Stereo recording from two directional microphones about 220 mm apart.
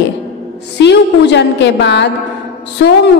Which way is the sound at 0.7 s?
50° left (ahead or behind).